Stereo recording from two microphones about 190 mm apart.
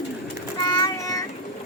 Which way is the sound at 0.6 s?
20° left (ahead or behind).